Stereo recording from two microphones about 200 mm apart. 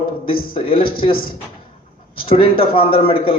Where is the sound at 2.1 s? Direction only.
25° left (ahead or behind).